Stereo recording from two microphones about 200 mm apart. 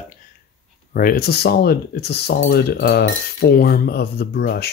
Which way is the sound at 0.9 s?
45° left (ahead or behind).